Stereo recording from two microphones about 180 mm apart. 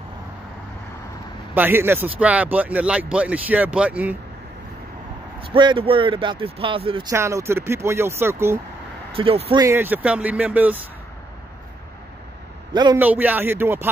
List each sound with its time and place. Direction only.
1.5 s speech: 10° right (ahead or behind)
5.5 s speech: 30° right (ahead or behind)
7.1 s speech: 15° right (ahead or behind)
9.1 s speech: 30° right (ahead or behind)
9.6 s speech: 15° right (ahead or behind)
12.7 s speech: 25° right (ahead or behind)
13.0 s speech: 10° right (ahead or behind)